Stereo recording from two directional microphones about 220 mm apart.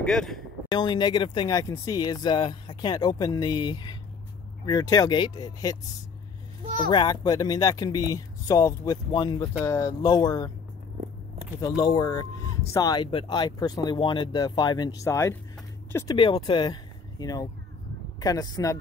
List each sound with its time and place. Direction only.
0.0 s speech: centre (ahead or behind)
0.7 s speech: 20° left (ahead or behind)
6.9 s speech: 20° left (ahead or behind)
11.6 s speech: 15° left (ahead or behind)